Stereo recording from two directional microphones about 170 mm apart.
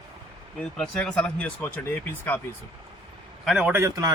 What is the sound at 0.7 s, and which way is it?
Speech, 5° left (ahead or behind).